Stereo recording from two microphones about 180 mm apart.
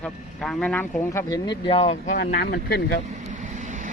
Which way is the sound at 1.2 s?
20° left (ahead or behind).